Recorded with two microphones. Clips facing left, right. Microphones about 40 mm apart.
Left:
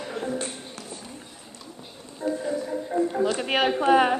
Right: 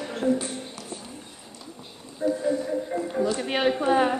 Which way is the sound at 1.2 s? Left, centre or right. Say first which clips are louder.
Even; centre.